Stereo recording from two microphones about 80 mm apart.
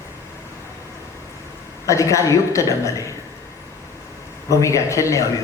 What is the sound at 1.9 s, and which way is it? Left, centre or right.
A man's voice, left.